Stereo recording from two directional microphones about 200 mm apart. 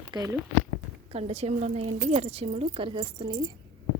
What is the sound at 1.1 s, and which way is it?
A woman's voice, 35° right (ahead or behind).